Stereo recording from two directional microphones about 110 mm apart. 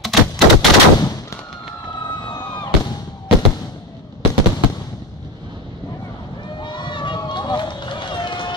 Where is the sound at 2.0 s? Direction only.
40° left (ahead or behind).